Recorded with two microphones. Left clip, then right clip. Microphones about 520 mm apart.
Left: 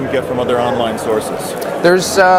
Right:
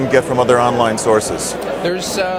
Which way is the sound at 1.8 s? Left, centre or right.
Left.